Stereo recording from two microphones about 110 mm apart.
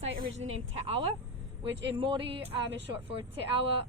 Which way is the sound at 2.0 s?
50° right (ahead or behind).